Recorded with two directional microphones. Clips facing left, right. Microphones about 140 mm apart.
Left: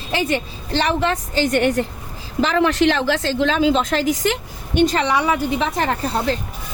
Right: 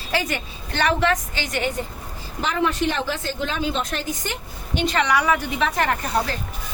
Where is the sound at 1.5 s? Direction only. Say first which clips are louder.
Left 6 dB; 65° left (ahead or behind).